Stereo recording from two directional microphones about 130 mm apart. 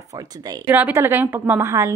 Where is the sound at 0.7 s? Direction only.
15° right (ahead or behind).